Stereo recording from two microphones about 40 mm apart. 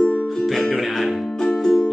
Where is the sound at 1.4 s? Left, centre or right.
Left.